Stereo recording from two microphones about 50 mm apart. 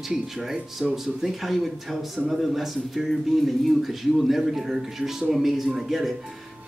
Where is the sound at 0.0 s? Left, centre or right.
Centre.